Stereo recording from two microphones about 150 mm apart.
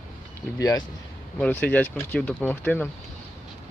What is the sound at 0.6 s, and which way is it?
Speech, 25° left (ahead or behind).